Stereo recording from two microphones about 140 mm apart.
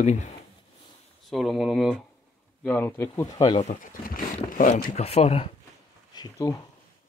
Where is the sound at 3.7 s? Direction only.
85° left.